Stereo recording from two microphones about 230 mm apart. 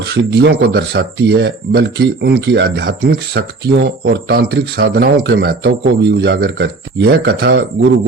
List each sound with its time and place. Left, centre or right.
0.0 s speech: right